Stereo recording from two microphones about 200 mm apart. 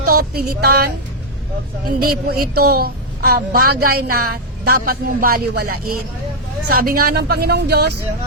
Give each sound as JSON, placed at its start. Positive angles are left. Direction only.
{"t": 0.0, "sound": "speech", "side_deg": -45}
{"t": 2.0, "sound": "a woman's voice", "side_deg": -50}